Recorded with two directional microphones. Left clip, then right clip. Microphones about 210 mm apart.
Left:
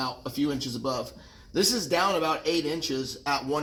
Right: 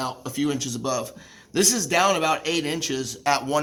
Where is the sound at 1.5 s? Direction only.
40° right (ahead or behind).